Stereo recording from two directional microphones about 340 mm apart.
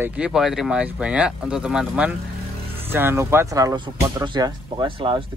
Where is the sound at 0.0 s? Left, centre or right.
Centre.